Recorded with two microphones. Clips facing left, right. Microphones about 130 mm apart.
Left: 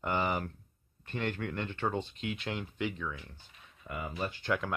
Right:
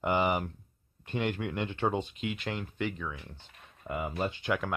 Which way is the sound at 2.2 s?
Centre (ahead or behind).